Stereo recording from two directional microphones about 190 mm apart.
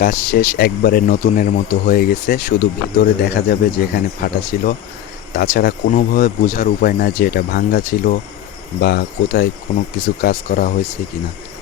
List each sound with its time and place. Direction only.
0.0 s speech: 50° left (ahead or behind)